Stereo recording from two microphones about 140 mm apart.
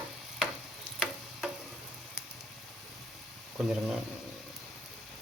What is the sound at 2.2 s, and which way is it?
Squish, 20° left (ahead or behind).